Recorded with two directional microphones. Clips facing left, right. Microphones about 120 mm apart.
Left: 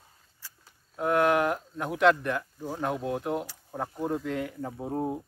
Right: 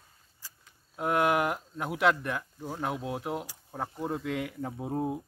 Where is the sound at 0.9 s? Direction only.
5° right (ahead or behind).